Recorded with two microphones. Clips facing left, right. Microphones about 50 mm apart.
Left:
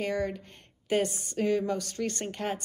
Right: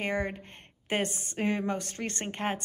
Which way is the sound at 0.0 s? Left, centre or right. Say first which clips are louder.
Left 1 dB; right.